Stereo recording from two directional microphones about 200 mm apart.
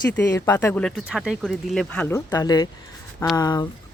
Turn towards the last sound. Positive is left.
turn(degrees=20)  # may be behind; listen again after turning